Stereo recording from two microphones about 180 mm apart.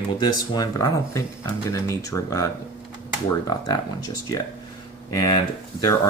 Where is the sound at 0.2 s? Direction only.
20° left (ahead or behind).